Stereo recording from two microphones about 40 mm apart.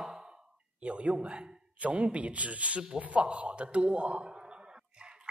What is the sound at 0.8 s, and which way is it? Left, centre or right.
A man's voice, right.